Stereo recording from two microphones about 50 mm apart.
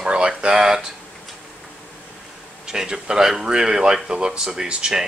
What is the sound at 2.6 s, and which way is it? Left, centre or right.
Speech, centre.